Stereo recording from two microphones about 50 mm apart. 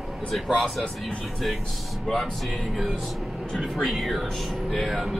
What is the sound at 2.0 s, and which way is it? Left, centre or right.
Speech, centre.